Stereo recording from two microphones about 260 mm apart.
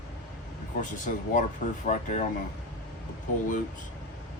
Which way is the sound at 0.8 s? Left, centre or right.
Left.